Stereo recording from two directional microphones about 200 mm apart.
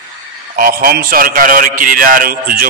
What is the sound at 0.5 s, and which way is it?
A man's voice, 45° right (ahead or behind).